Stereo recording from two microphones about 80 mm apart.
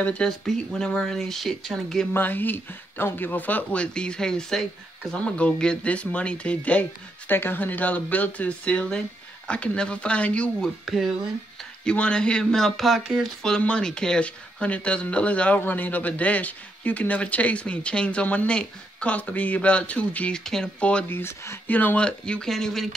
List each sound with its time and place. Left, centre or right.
0.0 s speech: centre
2.1 s speech: left
11.8 s speech: centre
13.4 s speech: centre
21.1 s speech: left
21.6 s speech: left; by 22.8 s centre